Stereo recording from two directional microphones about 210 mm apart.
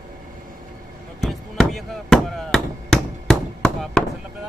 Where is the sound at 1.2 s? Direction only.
Centre (ahead or behind).